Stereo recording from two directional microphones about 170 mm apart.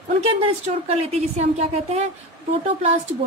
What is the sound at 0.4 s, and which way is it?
A woman's voice, 35° right (ahead or behind).